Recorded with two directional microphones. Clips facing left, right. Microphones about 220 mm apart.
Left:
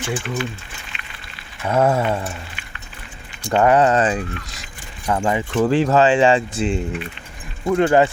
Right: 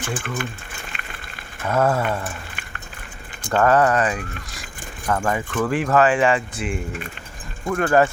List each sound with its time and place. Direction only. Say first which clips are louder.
0.0 s speech: left 3 dB; 50° right (ahead or behind)
1.6 s speech: left 2 dB; 15° left (ahead or behind)
3.5 s speech: left 2 dB; 20° left (ahead or behind)
5.5 s speech: left 4 dB; 30° left (ahead or behind)